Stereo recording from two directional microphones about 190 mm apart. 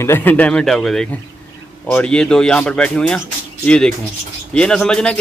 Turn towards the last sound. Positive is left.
turn(degrees=5)  # may be behind; listen again after turning